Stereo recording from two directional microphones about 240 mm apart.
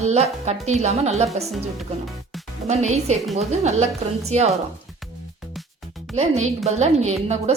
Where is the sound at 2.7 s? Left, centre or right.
Right.